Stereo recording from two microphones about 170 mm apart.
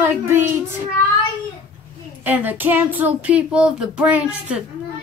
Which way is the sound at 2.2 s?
10° right (ahead or behind).